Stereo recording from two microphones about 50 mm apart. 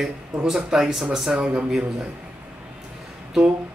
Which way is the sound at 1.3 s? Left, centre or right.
Right.